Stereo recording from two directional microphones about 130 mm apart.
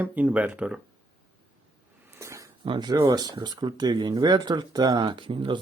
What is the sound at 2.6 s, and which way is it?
Speech, 35° right (ahead or behind).